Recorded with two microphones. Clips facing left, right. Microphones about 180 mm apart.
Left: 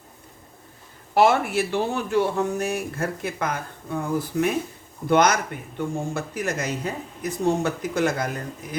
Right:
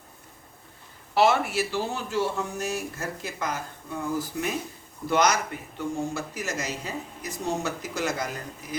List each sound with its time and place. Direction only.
1.1 s speech: 50° left (ahead or behind)